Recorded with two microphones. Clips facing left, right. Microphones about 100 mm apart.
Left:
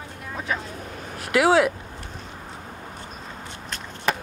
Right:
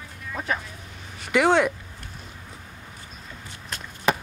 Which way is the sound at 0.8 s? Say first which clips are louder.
Left 7 dB; 55° left (ahead or behind).